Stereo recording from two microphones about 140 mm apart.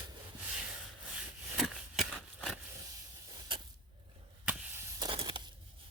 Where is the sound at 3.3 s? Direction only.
35° right (ahead or behind).